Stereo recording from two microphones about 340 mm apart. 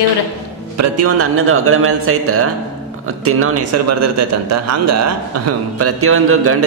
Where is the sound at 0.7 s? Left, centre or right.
Right.